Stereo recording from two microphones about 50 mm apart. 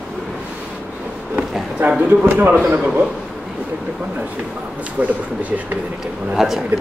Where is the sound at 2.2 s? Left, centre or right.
Right.